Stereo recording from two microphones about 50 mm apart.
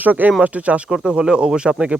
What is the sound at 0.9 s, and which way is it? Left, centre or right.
Speech, centre.